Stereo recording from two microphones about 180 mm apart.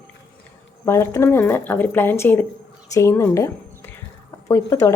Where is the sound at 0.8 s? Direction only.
15° left (ahead or behind).